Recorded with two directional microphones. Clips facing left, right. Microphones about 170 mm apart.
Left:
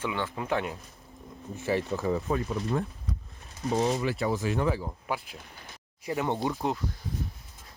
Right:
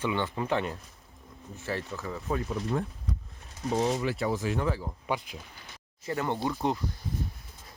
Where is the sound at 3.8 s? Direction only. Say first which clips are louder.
Left 1 dB; 55° left (ahead or behind).